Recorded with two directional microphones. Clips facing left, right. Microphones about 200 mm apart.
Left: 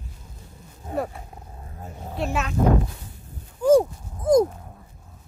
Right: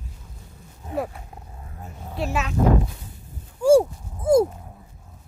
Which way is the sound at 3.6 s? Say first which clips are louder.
Right 1 dB; 10° right (ahead or behind).